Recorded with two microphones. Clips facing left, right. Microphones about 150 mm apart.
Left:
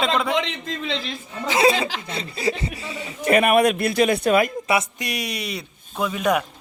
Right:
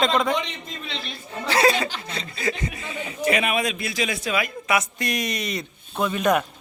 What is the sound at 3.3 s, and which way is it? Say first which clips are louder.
A man's voice: left 7 dB; 55° left (ahead or behind).